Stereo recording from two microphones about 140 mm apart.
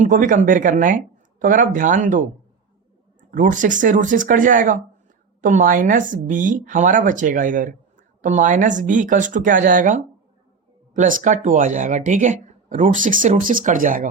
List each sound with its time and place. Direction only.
0.0 s speech: 65° right (ahead or behind)
3.3 s speech: 70° right (ahead or behind)